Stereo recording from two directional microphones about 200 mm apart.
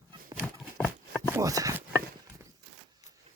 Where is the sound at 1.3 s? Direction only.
15° right (ahead or behind).